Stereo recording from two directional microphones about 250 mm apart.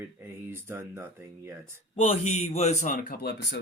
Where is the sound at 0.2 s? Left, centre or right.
Centre.